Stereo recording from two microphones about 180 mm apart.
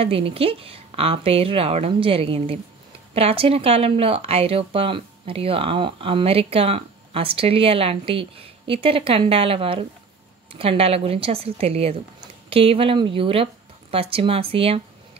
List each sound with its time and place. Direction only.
0.0 s speech: 30° right (ahead or behind)